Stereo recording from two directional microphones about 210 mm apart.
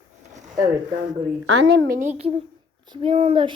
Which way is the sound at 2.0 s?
30° right (ahead or behind).